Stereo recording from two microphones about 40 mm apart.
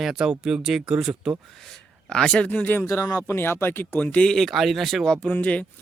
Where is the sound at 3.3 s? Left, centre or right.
Left.